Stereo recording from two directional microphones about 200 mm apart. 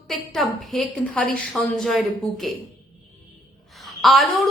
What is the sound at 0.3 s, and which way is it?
A woman's voice, centre (ahead or behind).